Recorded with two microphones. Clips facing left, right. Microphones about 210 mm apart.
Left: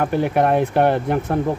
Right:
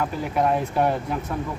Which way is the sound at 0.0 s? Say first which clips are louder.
Left 6 dB; 65° left (ahead or behind).